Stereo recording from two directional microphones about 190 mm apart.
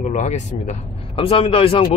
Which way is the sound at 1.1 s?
30° left (ahead or behind).